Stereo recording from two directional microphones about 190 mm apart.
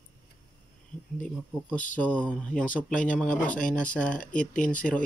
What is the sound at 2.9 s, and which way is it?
Speech, 40° left (ahead or behind).